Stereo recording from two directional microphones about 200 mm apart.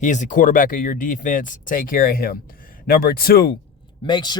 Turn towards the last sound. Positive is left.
turn(degrees=20)  # may be behind; listen again after turning